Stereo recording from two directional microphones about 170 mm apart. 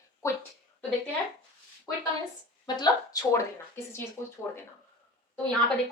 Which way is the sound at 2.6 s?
25° left (ahead or behind).